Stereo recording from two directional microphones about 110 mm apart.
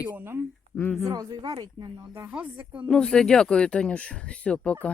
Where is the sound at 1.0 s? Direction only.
30° right (ahead or behind).